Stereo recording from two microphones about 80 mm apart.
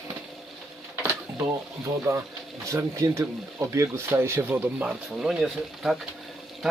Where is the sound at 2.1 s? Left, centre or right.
Right; by 6.0 s centre.